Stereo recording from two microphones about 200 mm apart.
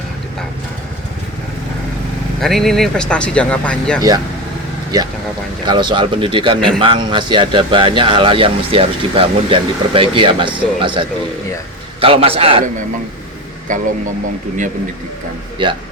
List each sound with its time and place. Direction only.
2.4 s speech: centre (ahead or behind)
4.9 s speech: 20° right (ahead or behind)
13.7 s speech: 40° right (ahead or behind)